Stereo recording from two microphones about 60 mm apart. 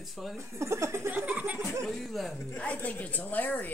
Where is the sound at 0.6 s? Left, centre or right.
Right.